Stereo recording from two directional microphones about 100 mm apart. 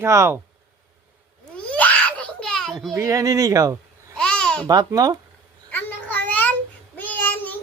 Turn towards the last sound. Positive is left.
turn(degrees=15)  # may be behind; listen again after turning